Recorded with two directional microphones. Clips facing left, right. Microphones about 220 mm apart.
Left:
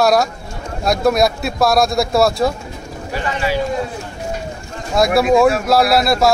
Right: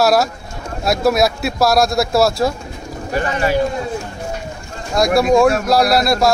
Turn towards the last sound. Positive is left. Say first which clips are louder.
# even
turn(degrees=0)  # may be behind; listen again after turning